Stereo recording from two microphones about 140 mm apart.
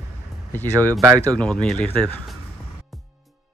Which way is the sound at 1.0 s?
20° right (ahead or behind).